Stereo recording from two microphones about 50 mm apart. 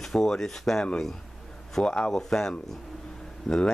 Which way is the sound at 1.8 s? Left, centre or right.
Centre.